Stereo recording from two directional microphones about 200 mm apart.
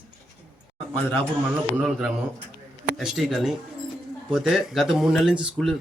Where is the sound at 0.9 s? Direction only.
10° left (ahead or behind).